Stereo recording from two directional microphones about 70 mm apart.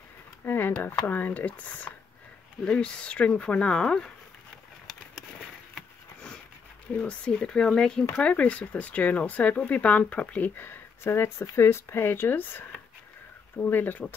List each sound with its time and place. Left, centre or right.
0.5 s speech: left; by 4.1 s centre
7.0 s speech: centre; by 12.6 s left
13.7 s speech: left